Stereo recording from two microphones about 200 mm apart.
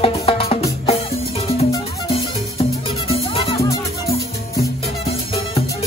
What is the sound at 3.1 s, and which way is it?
Music, 30° left (ahead or behind).